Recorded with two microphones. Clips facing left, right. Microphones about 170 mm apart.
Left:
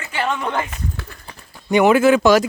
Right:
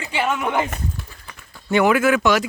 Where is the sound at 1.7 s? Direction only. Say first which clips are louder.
Left 4 dB; 20° left (ahead or behind).